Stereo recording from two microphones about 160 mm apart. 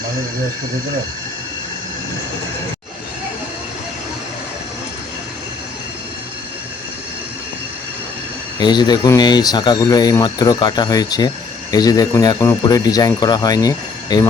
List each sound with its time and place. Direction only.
8.5 s speech: 25° left (ahead or behind)